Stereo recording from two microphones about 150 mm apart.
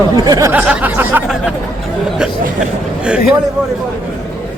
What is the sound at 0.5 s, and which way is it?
Speech, 10° right (ahead or behind).